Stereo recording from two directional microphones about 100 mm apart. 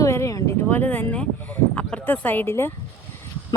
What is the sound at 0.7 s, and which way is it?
Speech, 15° left (ahead or behind).